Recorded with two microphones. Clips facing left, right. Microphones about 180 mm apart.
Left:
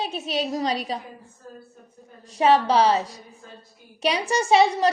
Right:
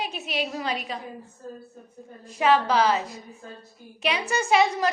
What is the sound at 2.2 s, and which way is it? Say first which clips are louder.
A woman's voice: left 3 dB; 35° left (ahead or behind).